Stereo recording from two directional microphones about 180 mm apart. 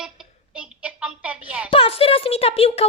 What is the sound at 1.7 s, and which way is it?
A woman's voice, 30° left (ahead or behind).